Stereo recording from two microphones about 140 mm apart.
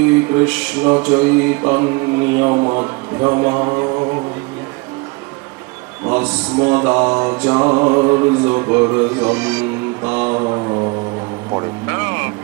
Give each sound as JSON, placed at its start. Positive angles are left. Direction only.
{"t": 0.0, "sound": "mantra", "side_deg": -15}
{"t": 6.1, "sound": "mantra", "side_deg": -10}
{"t": 10.4, "sound": "mantra", "side_deg": -30}
{"t": 11.9, "sound": "vehicle", "side_deg": -15}